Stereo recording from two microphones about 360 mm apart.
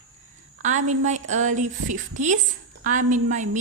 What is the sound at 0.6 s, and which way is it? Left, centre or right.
A woman's voice, centre.